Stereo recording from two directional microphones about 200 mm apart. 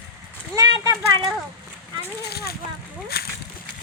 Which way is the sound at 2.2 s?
50° left (ahead or behind).